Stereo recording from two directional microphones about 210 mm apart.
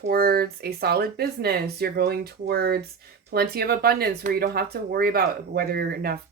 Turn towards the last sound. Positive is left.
turn(degrees=-50)  # may be behind; listen again after turning